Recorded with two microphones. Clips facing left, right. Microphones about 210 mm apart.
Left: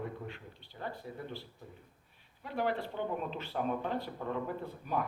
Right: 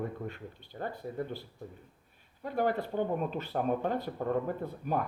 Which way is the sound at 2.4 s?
45° right (ahead or behind).